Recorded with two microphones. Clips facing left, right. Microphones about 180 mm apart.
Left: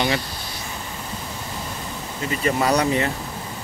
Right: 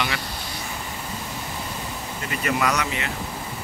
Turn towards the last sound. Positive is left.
turn(degrees=35)  # may be behind; listen again after turning